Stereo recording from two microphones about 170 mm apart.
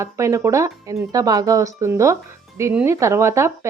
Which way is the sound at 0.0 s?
15° right (ahead or behind).